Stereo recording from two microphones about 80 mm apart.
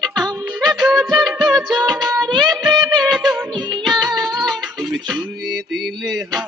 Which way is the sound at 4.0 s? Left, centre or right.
Right.